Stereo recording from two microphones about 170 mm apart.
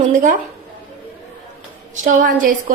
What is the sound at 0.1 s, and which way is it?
Speech, 50° right (ahead or behind).